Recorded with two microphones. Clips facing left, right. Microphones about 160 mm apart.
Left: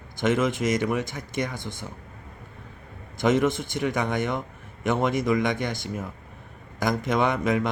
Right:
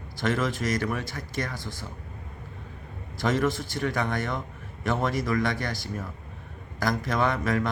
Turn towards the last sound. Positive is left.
turn(degrees=20)  # may be behind; listen again after turning